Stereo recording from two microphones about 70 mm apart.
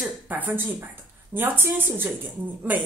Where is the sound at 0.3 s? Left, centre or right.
Right.